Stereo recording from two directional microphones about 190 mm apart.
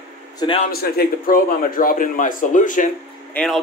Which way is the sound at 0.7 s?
50° left (ahead or behind).